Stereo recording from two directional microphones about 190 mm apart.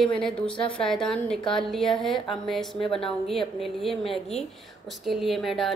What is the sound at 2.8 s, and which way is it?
Speech, 30° left (ahead or behind).